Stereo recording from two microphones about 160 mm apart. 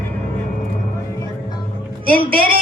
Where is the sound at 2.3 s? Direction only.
65° right (ahead or behind).